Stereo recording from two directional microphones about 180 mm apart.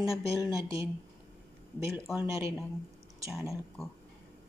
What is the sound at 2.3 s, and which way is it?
Speech, 15° right (ahead or behind).